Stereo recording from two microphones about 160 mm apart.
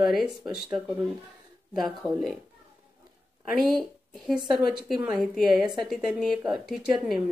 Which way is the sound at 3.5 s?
Centre (ahead or behind).